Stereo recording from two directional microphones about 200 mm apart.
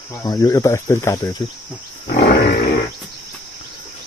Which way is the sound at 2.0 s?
55° left (ahead or behind).